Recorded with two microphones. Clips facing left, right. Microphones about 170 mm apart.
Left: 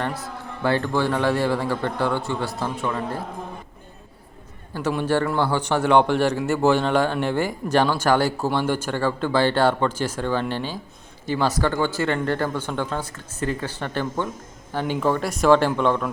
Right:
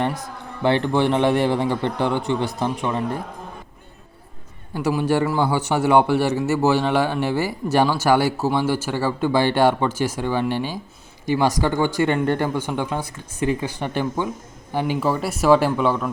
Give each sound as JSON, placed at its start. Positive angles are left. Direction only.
{"t": 0.6, "sound": "a man's voice", "side_deg": -20}
{"t": 4.7, "sound": "a man's voice", "side_deg": -10}